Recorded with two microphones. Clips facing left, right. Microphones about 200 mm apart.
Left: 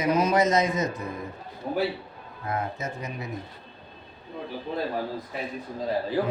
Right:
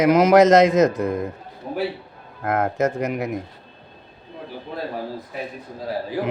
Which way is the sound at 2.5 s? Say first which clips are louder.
Right 10 dB; 85° right.